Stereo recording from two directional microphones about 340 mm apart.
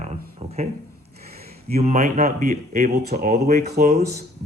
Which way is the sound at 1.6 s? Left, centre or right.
Centre.